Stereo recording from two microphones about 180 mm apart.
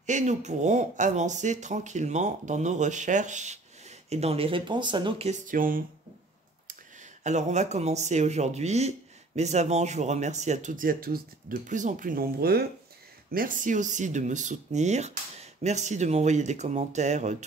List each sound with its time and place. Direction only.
0.0 s speech: 40° right (ahead or behind)
5.3 s speech: 50° right (ahead or behind)
7.2 s speech: 40° right (ahead or behind)